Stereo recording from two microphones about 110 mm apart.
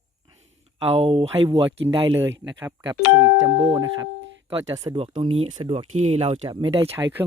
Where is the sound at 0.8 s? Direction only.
60° right (ahead or behind); by 1.7 s 40° right (ahead or behind).